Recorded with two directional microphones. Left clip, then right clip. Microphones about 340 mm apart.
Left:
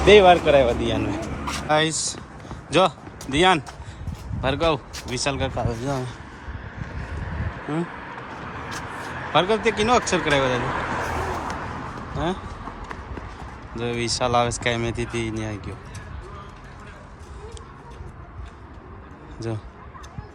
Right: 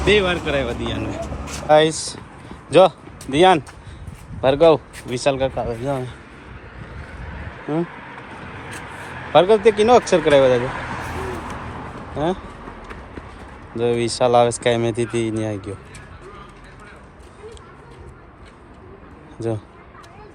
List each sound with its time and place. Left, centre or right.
0.0 s speech: centre
4.4 s speech: centre
7.2 s vehicle: left
9.3 s speech: centre
10.6 s a sound: left
12.1 s speech: centre
13.7 s speech: centre